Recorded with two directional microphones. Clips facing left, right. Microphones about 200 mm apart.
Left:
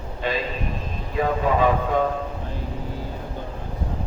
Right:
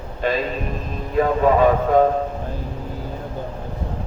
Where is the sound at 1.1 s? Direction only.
45° right (ahead or behind).